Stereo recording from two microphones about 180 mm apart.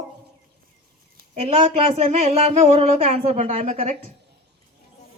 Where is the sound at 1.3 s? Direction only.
35° right (ahead or behind).